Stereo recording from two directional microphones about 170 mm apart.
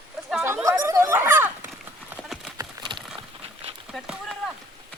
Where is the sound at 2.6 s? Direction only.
25° right (ahead or behind).